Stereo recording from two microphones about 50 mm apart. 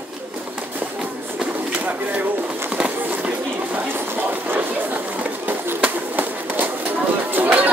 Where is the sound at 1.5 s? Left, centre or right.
Right.